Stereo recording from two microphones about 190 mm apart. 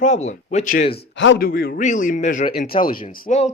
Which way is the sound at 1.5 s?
50° left (ahead or behind).